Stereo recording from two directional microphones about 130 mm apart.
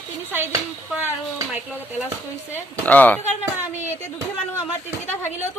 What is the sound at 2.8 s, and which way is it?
Speech, 10° left (ahead or behind).